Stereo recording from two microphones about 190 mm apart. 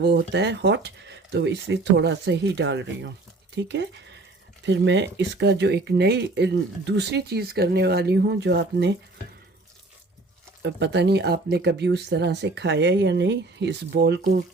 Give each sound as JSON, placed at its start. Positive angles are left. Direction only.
{"t": 0.0, "sound": "speech", "side_deg": -60}
{"t": 10.6, "sound": "speech", "side_deg": -65}